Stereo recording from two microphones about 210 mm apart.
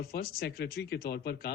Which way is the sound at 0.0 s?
45° left (ahead or behind).